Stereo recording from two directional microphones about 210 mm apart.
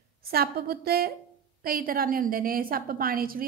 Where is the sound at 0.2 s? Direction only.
45° right (ahead or behind).